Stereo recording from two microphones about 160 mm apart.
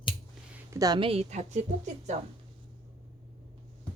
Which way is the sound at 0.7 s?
25° right (ahead or behind).